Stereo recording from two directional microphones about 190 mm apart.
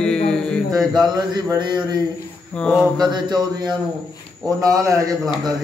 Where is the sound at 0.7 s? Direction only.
20° right (ahead or behind).